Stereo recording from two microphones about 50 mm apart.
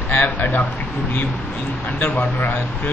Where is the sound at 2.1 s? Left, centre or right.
Left.